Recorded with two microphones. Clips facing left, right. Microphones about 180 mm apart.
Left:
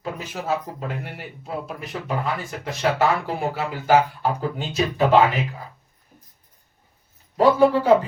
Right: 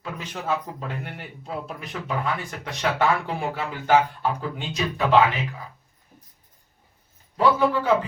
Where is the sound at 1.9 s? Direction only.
35° left (ahead or behind).